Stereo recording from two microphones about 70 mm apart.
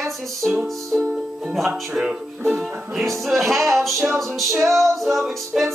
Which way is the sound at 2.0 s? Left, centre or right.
Centre.